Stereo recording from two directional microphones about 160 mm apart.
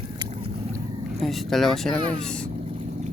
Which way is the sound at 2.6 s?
40° right (ahead or behind).